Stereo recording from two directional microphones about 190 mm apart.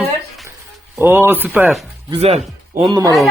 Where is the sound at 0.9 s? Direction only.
10° right (ahead or behind).